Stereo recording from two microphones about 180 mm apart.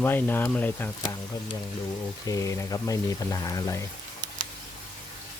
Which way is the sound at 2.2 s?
20° left (ahead or behind).